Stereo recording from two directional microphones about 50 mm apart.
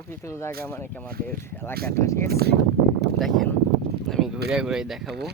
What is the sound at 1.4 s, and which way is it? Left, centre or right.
Speech, left.